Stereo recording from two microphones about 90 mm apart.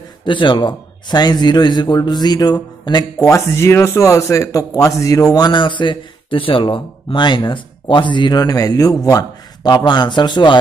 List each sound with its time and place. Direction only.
0.2 s a man's voice: 65° left (ahead or behind)